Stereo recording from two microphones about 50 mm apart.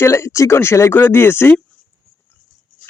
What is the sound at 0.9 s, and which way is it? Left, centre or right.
Speech, left.